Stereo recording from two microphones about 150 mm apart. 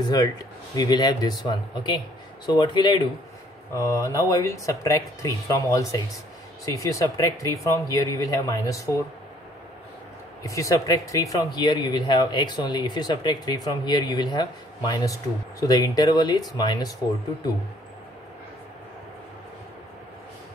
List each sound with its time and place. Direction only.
0.0 s speech: 25° left (ahead or behind)
3.7 s speech: 20° left (ahead or behind)
10.4 s speech: 20° left (ahead or behind)